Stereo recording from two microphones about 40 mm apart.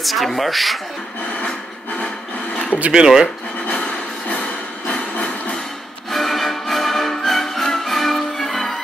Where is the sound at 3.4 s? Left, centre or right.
Left.